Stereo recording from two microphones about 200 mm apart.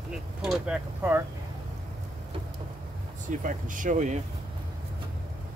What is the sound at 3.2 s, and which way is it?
Speech, 40° right (ahead or behind).